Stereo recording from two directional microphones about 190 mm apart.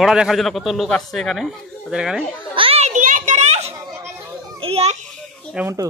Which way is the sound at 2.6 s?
30° right (ahead or behind).